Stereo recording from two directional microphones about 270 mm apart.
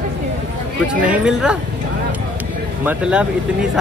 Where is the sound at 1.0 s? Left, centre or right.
Centre.